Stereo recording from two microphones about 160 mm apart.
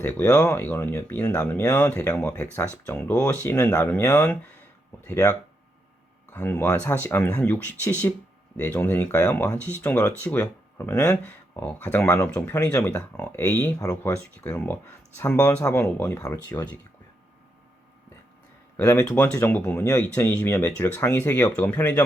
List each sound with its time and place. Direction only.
0.0 s speech: 10° left (ahead or behind)
18.8 s speech: 15° left (ahead or behind)